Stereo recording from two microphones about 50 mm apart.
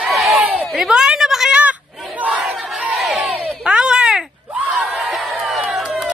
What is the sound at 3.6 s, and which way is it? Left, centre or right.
Baby cry, centre.